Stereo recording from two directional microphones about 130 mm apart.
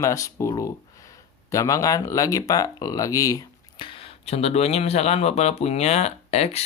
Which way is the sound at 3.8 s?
45° left (ahead or behind).